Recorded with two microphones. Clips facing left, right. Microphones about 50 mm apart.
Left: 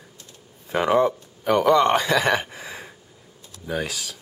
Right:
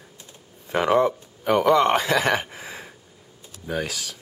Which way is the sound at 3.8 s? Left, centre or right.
Left.